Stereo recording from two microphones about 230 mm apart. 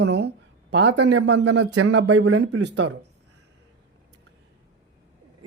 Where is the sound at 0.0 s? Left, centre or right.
Right.